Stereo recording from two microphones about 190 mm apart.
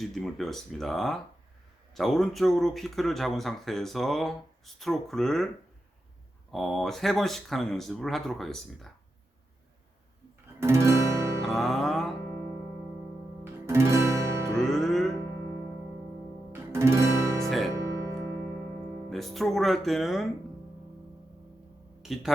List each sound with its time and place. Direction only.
0.0 s speech: centre (ahead or behind)
6.5 s speech: centre (ahead or behind)
10.6 s guitar: 15° right (ahead or behind)
11.4 s music: centre (ahead or behind)
12.3 s music: 10° right (ahead or behind)
14.6 s music: centre (ahead or behind)
16.5 s guitar: 15° right (ahead or behind)
17.7 s music: 15° right (ahead or behind)
19.1 s speech: centre (ahead or behind)
22.0 s speech: centre (ahead or behind)